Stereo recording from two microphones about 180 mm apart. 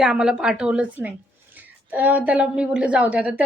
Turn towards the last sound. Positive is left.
turn(degrees=-5)  # may be behind; listen again after turning